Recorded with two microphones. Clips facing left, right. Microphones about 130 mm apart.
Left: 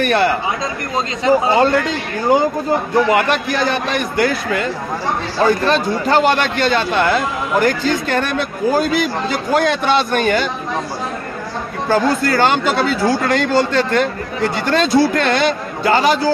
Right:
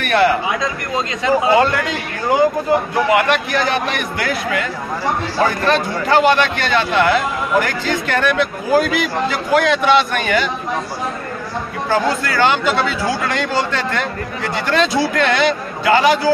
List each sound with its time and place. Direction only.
0.0 s a man's voice: 35° left (ahead or behind)
11.9 s a man's voice: 40° left (ahead or behind)